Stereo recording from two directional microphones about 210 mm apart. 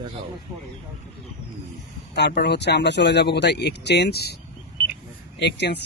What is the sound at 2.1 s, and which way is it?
Speech, 50° left (ahead or behind).